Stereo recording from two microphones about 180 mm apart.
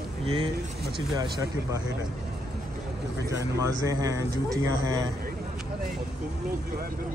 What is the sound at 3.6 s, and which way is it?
Speech, 20° right (ahead or behind).